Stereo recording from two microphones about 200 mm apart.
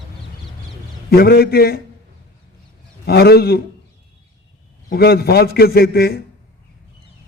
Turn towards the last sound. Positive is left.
turn(degrees=50)  # may be behind; listen again after turning